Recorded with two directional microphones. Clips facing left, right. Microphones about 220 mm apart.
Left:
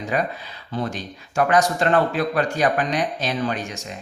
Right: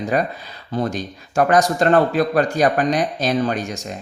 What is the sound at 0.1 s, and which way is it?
Speech, 40° right (ahead or behind).